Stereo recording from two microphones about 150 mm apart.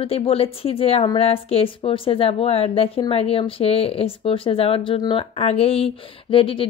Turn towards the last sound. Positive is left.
turn(degrees=35)  # may be behind; listen again after turning